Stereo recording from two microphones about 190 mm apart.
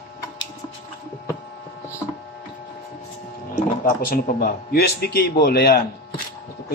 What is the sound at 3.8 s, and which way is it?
Speech, 50° left (ahead or behind).